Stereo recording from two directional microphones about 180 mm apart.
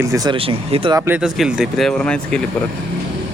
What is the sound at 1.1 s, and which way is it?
Speech, 5° right (ahead or behind).